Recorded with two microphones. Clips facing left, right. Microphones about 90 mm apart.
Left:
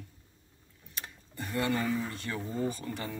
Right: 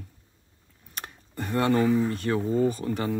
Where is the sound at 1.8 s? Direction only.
35° right (ahead or behind).